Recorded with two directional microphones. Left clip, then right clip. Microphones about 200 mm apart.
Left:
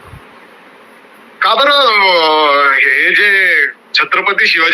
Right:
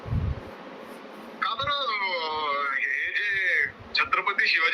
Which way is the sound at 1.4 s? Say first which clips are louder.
Left 18 dB; 60° left (ahead or behind).